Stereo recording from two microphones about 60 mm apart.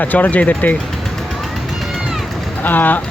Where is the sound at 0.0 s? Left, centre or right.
Left.